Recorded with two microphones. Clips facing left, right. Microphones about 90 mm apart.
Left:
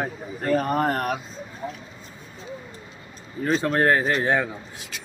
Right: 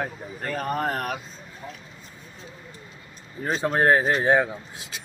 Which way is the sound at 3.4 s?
15° right (ahead or behind).